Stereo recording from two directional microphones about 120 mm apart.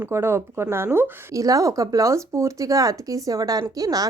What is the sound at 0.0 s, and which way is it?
Speech, 20° right (ahead or behind).